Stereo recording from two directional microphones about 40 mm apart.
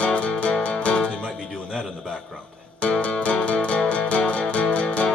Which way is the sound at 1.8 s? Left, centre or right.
Centre.